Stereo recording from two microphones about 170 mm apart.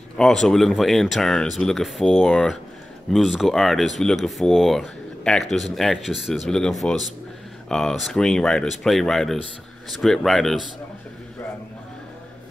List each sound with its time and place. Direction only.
0.2 s speech: 5° left (ahead or behind)